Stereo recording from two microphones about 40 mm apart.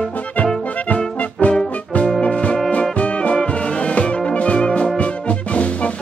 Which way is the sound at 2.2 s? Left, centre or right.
Left.